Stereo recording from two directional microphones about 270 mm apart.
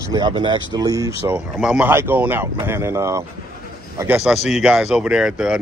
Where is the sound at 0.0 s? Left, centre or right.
Centre.